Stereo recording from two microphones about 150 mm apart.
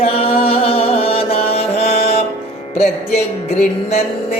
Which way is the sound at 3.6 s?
45° left (ahead or behind).